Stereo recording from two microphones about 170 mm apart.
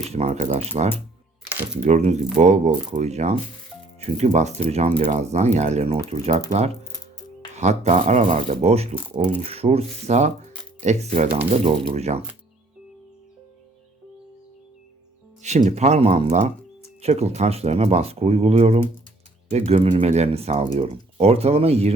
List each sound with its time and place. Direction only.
0.0 s speech: 40° right (ahead or behind)
1.5 s a sound: 10° right (ahead or behind)
1.8 s speech: 45° right (ahead or behind)
7.5 s speech: 40° right (ahead or behind)
15.4 s speech: 40° right (ahead or behind)